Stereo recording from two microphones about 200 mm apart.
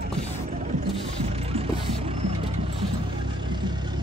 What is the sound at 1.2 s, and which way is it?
Music, 30° right (ahead or behind).